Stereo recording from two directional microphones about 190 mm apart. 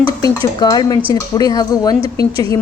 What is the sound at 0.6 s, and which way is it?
A woman's voice, 20° left (ahead or behind).